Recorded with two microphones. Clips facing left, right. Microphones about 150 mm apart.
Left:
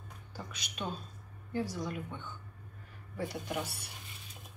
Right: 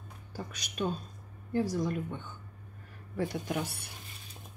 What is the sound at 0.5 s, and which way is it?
A woman's voice, 45° right (ahead or behind).